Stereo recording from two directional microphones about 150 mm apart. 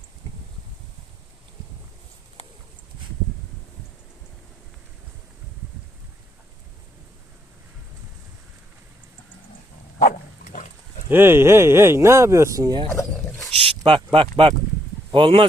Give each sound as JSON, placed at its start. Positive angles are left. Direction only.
{"t": 10.0, "sound": "dog", "side_deg": 65}
{"t": 11.1, "sound": "speech", "side_deg": -15}
{"t": 13.6, "sound": "a sound", "side_deg": -40}
{"t": 15.1, "sound": "speech", "side_deg": -35}